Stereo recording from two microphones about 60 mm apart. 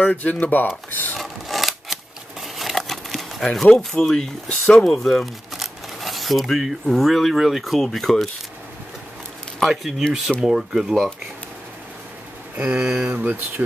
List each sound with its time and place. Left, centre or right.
0.0 s speech: left
1.1 s a sound: centre
3.7 s speech: centre
9.7 s speech: centre
12.5 s speech: right